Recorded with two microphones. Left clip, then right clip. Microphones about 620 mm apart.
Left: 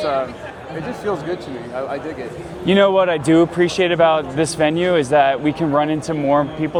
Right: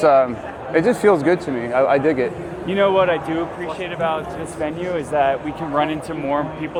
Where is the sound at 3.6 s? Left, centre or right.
Left.